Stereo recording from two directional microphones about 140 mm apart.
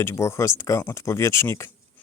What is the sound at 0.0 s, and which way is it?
Speech, 20° left (ahead or behind).